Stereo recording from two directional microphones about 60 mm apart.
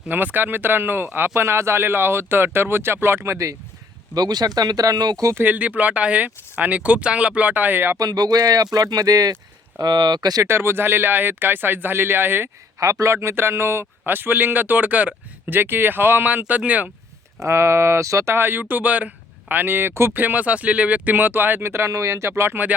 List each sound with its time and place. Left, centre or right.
0.1 s speech: right
4.1 s speech: right
5.4 s speech: right
7.9 s speech: right
9.7 s speech: right
12.8 s a man's voice: right
13.1 s speech: right
14.0 s speech: right
16.2 s speech: right
17.4 s speech: right
18.3 s speech: right
20.1 s speech: right